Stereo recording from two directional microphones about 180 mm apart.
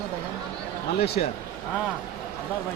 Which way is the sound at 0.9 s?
60° left (ahead or behind).